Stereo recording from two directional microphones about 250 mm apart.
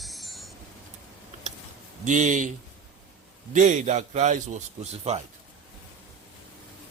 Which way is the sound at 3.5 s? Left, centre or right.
Right.